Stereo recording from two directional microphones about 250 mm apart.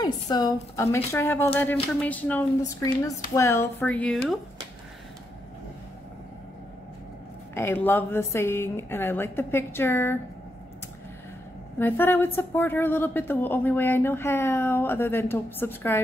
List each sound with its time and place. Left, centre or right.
0.0 s a woman's voice: centre
7.5 s a woman's voice: centre
11.8 s a woman's voice: centre